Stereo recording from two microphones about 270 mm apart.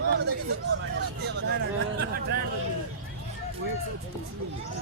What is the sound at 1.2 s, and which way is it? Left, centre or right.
Speech, right.